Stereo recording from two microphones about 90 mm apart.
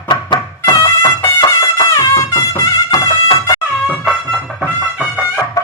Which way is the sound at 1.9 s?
35° left (ahead or behind).